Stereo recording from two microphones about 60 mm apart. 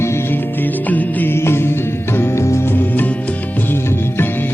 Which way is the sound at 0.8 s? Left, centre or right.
Left.